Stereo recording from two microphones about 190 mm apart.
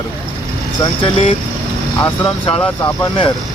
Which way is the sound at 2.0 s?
10° left (ahead or behind).